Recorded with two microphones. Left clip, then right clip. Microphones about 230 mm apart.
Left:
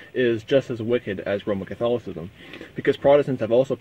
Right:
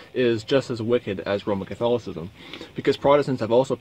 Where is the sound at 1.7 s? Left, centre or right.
Centre.